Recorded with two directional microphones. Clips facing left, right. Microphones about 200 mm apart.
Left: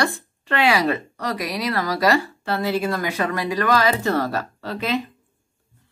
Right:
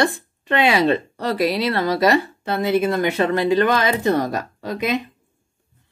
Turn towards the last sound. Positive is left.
turn(degrees=-15)  # may be behind; listen again after turning